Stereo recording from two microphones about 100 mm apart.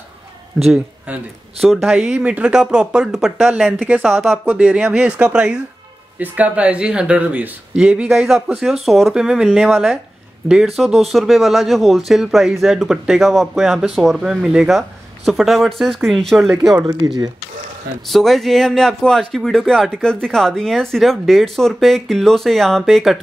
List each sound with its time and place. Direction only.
1.6 s speech: centre (ahead or behind)
4.1 s speech: centre (ahead or behind)
16.7 s speech: 40° right (ahead or behind)
18.0 s speech: centre (ahead or behind)